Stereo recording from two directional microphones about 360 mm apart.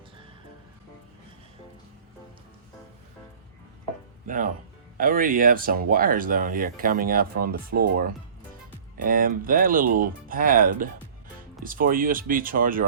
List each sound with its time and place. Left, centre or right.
4.3 s speech: right
9.0 s speech: right